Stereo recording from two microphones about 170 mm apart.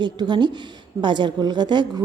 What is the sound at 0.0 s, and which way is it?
A woman's voice, 25° right (ahead or behind).